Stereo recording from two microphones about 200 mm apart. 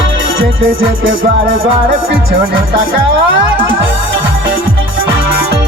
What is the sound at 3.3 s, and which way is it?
Music, 75° right (ahead or behind).